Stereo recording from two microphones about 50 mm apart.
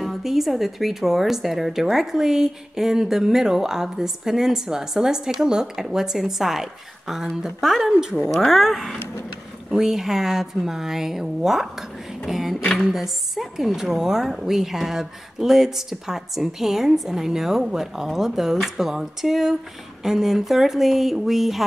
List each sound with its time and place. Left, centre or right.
0.0 s a woman's voice: centre
8.2 s speech: centre
8.5 s a woman's voice: centre